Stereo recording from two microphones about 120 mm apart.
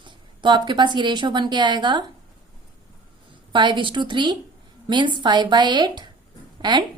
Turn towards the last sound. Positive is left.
turn(degrees=-40)  # may be behind; listen again after turning